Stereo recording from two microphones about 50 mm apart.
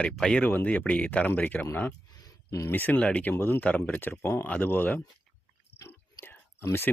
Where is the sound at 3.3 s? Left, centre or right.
Left.